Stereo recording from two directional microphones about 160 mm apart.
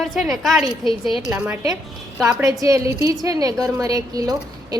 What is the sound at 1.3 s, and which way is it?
A woman's voice, 15° right (ahead or behind).